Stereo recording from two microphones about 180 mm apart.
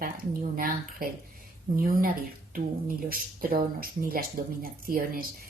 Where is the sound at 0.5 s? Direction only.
50° right (ahead or behind).